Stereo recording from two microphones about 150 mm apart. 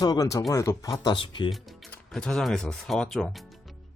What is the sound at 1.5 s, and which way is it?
Music, centre (ahead or behind).